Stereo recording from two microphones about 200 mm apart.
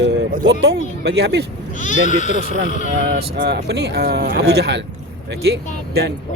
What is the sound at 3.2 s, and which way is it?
Speech, 55° right (ahead or behind).